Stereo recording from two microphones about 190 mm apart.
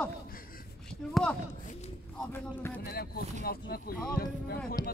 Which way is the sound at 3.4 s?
55° left (ahead or behind).